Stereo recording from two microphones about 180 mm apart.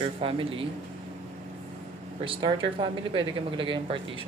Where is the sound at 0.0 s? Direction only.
30° right (ahead or behind).